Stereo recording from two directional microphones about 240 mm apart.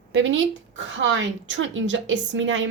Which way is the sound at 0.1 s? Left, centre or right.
Right.